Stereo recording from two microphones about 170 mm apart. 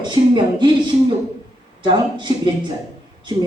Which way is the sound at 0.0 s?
25° right (ahead or behind).